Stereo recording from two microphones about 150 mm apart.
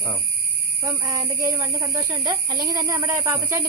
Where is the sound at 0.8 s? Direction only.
20° right (ahead or behind).